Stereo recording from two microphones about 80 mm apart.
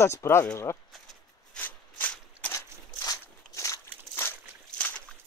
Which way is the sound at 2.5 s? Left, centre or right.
Left.